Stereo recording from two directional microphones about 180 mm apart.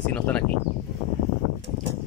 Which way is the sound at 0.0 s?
5° left (ahead or behind).